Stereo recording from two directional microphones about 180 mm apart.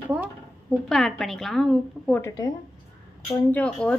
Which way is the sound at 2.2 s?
20° left (ahead or behind).